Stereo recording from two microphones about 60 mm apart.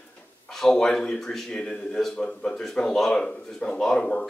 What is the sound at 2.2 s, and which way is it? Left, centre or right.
Speech, centre.